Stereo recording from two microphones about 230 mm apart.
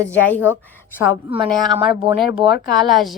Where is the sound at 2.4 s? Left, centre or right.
Right.